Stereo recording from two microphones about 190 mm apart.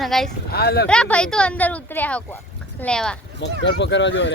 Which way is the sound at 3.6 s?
70° left (ahead or behind).